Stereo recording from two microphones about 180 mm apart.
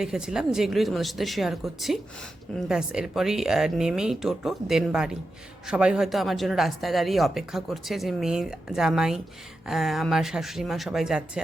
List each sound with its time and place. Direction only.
0.0 s speech: 5° right (ahead or behind)